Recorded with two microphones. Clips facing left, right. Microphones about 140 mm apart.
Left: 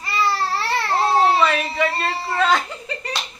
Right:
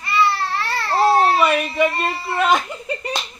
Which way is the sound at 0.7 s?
15° left (ahead or behind).